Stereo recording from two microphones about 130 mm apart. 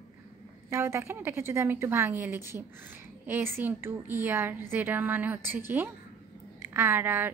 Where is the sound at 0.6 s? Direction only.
20° right (ahead or behind).